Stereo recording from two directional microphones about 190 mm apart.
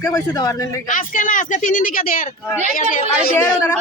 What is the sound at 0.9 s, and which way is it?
Speech, 45° left (ahead or behind).